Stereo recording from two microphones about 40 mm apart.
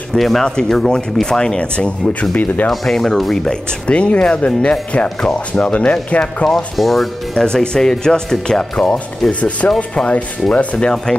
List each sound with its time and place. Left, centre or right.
0.1 s speech: centre
2.3 s speech: left
2.7 s speech: centre
3.8 s speech: left
6.4 s speech: centre
7.3 s speech: centre
9.3 s speech: left